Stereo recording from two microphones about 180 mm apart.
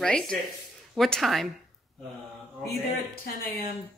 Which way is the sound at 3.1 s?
55° left (ahead or behind).